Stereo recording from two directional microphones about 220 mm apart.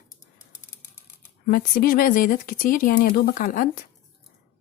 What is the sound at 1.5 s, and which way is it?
Speech, 40° left (ahead or behind).